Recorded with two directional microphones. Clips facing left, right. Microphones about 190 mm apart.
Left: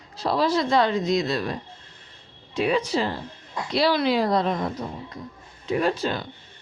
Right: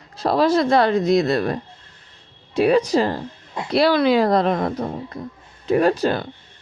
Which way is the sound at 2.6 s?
40° right (ahead or behind).